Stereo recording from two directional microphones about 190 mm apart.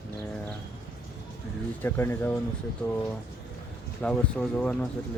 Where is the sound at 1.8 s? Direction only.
10° left (ahead or behind).